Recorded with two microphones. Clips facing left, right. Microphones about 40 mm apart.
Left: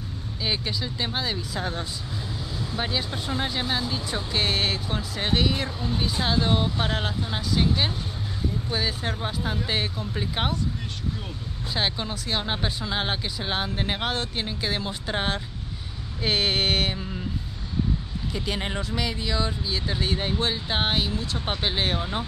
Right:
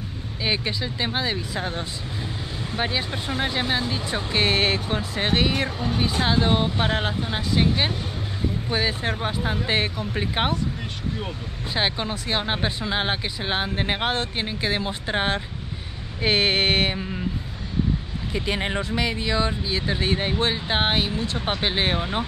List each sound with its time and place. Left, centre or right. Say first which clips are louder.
0.4 s speech: right 3 dB; right
2.6 s speech: right 3 dB; right
11.7 s speech: right 3 dB; right
18.3 s speech: right 4 dB; right